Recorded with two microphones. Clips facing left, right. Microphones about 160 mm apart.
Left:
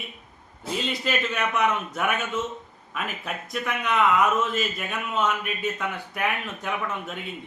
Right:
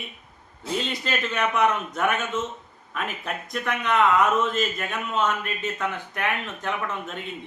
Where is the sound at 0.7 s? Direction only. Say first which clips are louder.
Even; 5° left (ahead or behind).